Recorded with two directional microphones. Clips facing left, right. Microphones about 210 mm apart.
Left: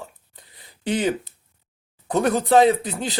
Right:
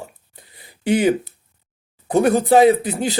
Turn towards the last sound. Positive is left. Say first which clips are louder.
# right 5 dB
turn(degrees=-10)  # may be behind; listen again after turning